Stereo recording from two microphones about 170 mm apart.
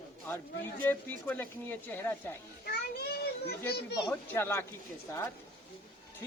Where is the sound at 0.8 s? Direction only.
10° left (ahead or behind).